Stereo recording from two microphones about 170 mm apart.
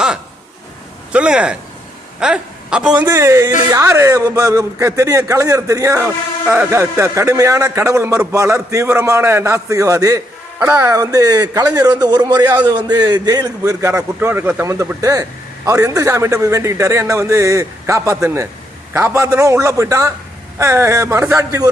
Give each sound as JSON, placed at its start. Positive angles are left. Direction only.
{"t": 1.1, "sound": "speech", "side_deg": -5}
{"t": 3.0, "sound": "a man's voice", "side_deg": -15}